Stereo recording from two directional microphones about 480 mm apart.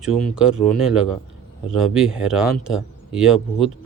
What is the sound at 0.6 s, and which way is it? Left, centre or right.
Speech, centre.